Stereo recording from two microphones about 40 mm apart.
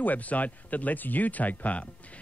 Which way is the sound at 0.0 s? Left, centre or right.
Left.